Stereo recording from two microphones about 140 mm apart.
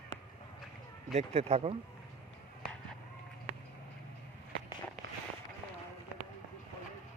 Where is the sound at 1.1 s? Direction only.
50° right (ahead or behind).